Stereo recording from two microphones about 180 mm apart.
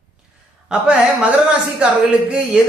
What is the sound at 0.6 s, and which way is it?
Speech, 5° right (ahead or behind).